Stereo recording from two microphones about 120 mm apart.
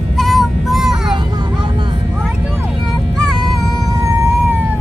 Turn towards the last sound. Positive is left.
turn(degrees=-25)  # may be behind; listen again after turning